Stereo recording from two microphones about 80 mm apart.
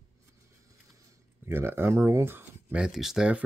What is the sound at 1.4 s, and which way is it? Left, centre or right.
Speech, right.